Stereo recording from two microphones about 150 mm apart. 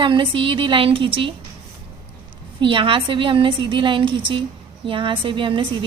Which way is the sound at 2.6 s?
35° right (ahead or behind).